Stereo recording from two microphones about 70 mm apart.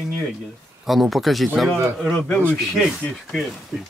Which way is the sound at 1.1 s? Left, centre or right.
Centre.